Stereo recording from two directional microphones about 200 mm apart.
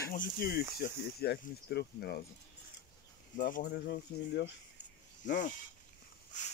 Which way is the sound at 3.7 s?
55° left (ahead or behind).